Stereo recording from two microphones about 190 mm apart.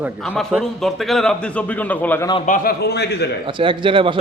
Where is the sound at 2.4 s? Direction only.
45° left (ahead or behind); by 3.3 s 60° left (ahead or behind).